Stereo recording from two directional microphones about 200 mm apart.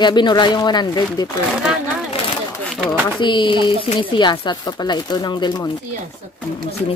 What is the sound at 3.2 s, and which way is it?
Speech, 25° left (ahead or behind).